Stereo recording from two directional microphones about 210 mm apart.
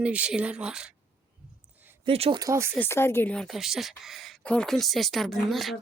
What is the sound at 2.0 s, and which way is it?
Speech, 25° right (ahead or behind).